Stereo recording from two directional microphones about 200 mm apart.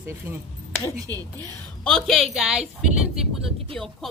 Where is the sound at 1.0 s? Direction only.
20° right (ahead or behind).